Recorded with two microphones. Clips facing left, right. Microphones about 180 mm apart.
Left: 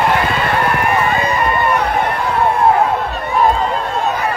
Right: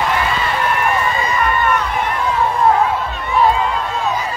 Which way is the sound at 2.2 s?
60° left (ahead or behind).